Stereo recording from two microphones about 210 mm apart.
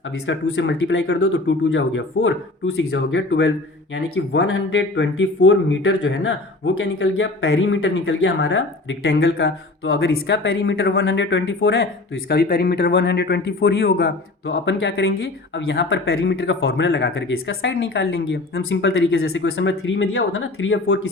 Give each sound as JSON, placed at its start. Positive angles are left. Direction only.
{"t": 0.3, "sound": "speech", "side_deg": 60}
{"t": 2.9, "sound": "a man's voice", "side_deg": 65}